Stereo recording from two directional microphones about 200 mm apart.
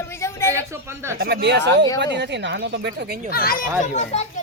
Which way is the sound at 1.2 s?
50° right (ahead or behind).